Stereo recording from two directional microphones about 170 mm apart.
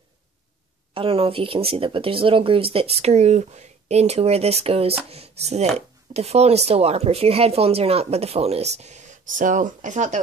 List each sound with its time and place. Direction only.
0.9 s speech: 35° right (ahead or behind)